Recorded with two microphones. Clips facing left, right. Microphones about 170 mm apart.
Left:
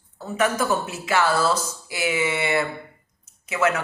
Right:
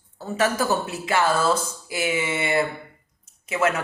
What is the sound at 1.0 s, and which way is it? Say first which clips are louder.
Speech: even; 30° right (ahead or behind).